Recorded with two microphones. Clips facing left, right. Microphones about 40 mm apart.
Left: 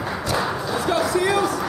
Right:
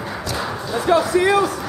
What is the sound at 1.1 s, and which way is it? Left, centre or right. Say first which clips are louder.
Speech: right 3 dB; centre.